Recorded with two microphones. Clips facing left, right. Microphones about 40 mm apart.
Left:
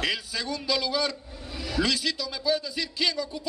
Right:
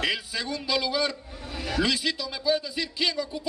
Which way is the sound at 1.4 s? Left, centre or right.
Right.